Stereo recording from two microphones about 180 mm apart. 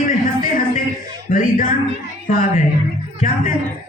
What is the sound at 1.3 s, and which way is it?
A woman's voice, 50° left (ahead or behind).